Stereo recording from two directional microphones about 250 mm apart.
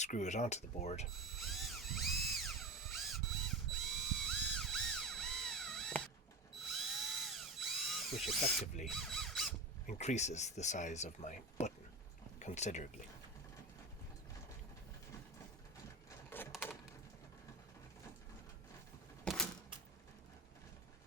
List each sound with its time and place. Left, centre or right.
0.0 s speech: left
1.4 s drill: centre
8.8 s a sound: centre
9.8 s speech: left
16.0 s a sound: centre
19.2 s typewriter: centre